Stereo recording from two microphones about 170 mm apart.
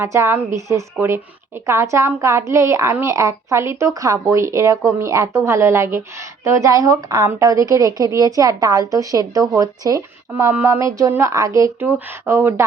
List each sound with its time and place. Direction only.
0.0 s a woman's voice: 15° right (ahead or behind)